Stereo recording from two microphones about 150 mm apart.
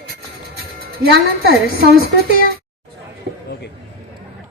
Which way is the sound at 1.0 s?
90° right.